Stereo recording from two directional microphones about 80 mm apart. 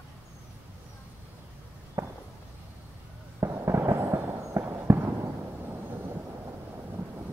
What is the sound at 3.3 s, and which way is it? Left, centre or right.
Fireworks, right.